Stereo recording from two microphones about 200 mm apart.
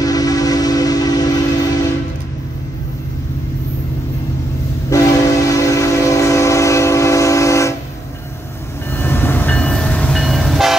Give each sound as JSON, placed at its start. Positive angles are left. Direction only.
{"t": 0.0, "sound": "train", "side_deg": 20}
{"t": 4.8, "sound": "train", "side_deg": 15}
{"t": 8.9, "sound": "train", "side_deg": 10}